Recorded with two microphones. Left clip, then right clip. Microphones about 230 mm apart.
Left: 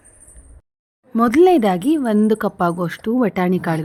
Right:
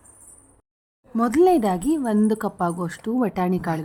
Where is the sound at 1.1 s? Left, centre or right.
Centre.